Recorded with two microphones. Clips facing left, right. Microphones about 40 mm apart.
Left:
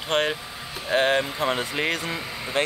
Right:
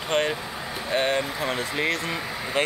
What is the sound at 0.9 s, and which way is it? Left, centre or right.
Speech, left.